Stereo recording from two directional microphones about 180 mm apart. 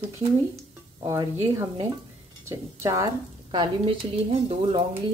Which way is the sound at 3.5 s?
30° right (ahead or behind).